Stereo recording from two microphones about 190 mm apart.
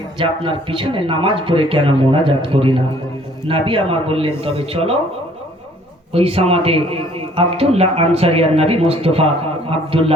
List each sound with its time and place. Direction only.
0.2 s speech: 25° right (ahead or behind)
6.1 s a man's voice: 30° right (ahead or behind)